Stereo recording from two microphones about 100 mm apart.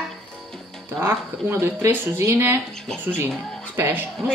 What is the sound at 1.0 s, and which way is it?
Speech, 25° right (ahead or behind).